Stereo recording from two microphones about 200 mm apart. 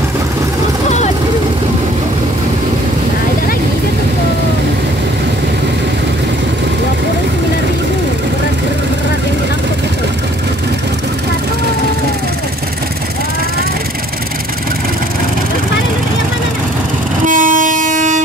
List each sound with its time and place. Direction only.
17.2 s train: 40° right (ahead or behind)